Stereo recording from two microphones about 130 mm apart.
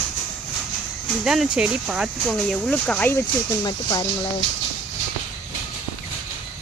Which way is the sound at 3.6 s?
30° left (ahead or behind).